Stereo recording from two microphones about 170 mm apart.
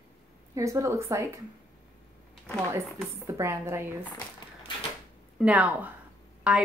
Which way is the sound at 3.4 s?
15° right (ahead or behind).